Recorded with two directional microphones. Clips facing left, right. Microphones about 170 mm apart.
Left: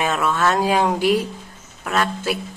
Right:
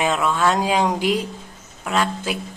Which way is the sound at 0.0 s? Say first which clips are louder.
Even; 15° right (ahead or behind).